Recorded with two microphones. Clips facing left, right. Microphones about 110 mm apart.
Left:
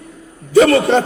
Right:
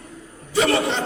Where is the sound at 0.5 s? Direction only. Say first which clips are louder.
Left 9 dB; 55° left (ahead or behind).